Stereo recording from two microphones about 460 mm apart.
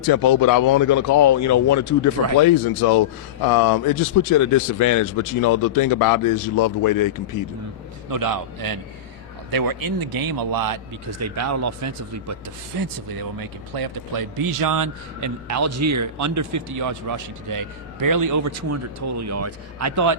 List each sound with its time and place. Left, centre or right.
0.0 s speech: left
2.4 s speech: left
8.1 s a man's voice: right